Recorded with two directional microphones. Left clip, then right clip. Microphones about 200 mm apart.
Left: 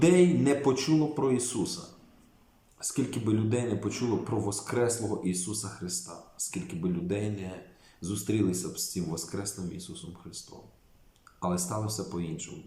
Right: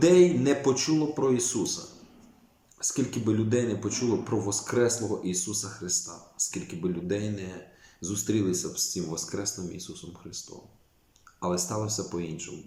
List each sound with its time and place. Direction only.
0.2 s speech: 5° left (ahead or behind)
2.8 s speech: 5° left (ahead or behind)
11.3 s speech: centre (ahead or behind)